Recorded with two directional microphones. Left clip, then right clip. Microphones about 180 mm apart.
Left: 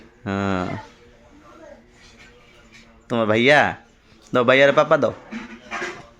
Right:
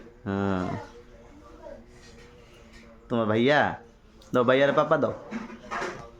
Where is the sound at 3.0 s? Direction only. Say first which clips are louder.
Left 7 dB; 25° left (ahead or behind).